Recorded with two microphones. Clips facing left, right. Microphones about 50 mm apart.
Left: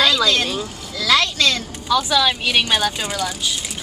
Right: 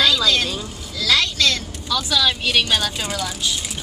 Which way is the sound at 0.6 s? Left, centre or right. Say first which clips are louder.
Left 2 dB; centre.